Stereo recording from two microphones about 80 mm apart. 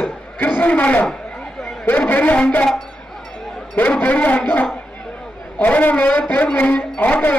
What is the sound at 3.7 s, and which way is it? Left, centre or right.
A man's voice, left.